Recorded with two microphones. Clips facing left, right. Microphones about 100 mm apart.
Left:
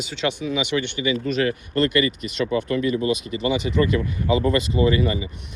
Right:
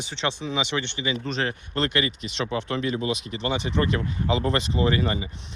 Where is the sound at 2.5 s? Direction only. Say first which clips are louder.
Left 5 dB; 60° right (ahead or behind).